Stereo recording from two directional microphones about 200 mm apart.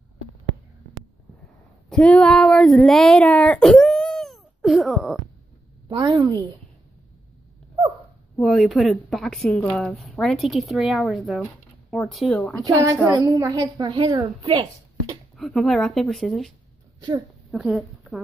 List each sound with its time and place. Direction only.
1.9 s speech: 5° left (ahead or behind)
5.9 s a woman's voice: 20° right (ahead or behind)
8.4 s a woman's voice: centre (ahead or behind)
12.6 s a woman's voice: 15° right (ahead or behind)
15.3 s a woman's voice: centre (ahead or behind)